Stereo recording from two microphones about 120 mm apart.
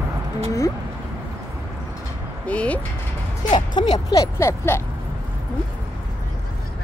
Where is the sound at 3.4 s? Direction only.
40° left (ahead or behind).